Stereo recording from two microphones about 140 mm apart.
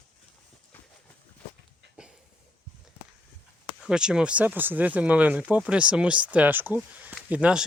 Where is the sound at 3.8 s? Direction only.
5° right (ahead or behind).